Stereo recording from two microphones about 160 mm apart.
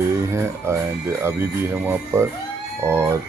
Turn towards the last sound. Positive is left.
turn(degrees=-15)  # may be behind; listen again after turning